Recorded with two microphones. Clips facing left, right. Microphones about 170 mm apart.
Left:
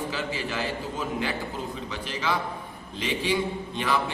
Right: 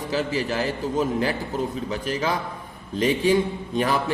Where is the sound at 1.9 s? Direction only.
45° right (ahead or behind).